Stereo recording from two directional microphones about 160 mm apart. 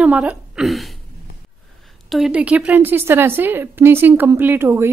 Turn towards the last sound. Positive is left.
turn(degrees=-15)  # may be behind; listen again after turning